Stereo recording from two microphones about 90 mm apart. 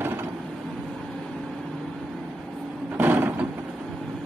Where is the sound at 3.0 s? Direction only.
20° right (ahead or behind).